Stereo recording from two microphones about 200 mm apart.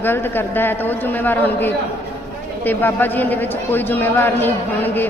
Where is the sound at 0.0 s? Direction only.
10° left (ahead or behind).